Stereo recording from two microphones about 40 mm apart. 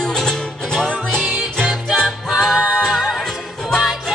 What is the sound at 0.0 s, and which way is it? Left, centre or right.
Music, centre.